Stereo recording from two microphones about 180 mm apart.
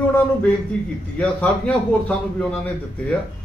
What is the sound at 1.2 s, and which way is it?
A man's voice, 5° left (ahead or behind).